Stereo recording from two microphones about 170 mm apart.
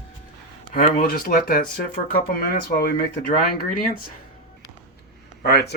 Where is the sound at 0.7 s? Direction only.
55° left (ahead or behind).